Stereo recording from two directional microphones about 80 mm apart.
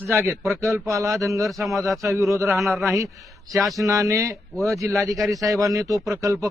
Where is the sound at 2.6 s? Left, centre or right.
Centre.